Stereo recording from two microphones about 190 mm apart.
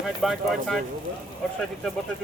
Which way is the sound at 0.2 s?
Centre (ahead or behind).